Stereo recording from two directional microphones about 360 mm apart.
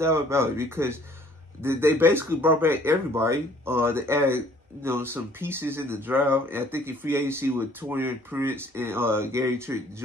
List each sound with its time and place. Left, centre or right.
0.0 s speech: centre